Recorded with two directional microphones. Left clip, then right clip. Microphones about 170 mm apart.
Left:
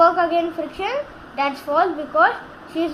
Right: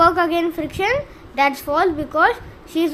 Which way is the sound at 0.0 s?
55° right (ahead or behind).